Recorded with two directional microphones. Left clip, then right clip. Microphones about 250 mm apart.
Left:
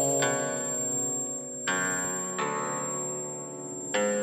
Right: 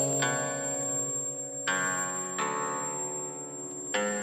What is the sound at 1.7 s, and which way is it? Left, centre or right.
Music, right.